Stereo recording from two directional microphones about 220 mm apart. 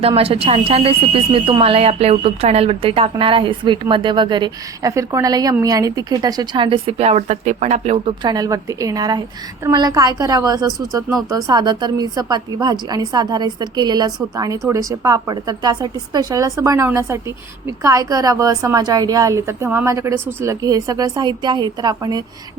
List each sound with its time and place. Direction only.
0.0 s a woman's voice: 25° right (ahead or behind)